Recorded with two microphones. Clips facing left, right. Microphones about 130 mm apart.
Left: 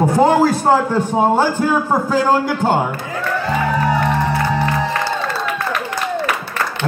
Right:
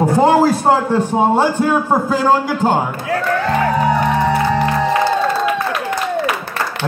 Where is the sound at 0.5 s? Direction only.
Centre (ahead or behind).